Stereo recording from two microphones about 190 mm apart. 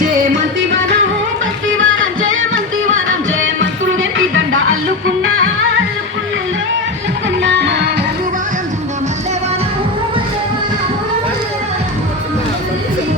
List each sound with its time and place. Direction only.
1.6 s music: 90° right
7.4 s music: 65° right (ahead or behind)